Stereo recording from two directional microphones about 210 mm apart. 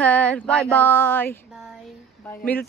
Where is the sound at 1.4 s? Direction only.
5° right (ahead or behind).